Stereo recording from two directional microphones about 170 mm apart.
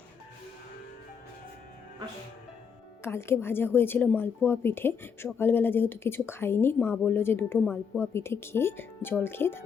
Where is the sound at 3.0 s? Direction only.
15° left (ahead or behind).